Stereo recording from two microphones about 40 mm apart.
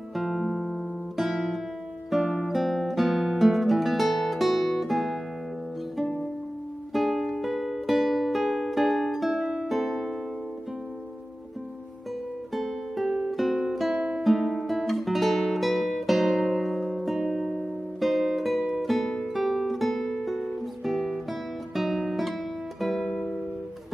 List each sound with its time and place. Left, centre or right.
0.1 s music: centre
1.1 s guitar: centre
2.0 s music: centre
6.9 s music: centre
12.5 s music: centre
13.9 s music: centre
14.2 s music: centre
14.7 s guitar: centre
17.3 s music: centre